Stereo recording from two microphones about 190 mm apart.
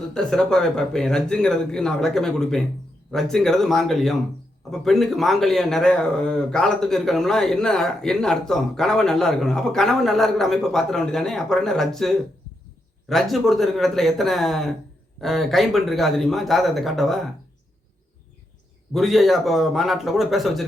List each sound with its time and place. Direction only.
0.1 s speech: 5° left (ahead or behind)
18.9 s speech: centre (ahead or behind)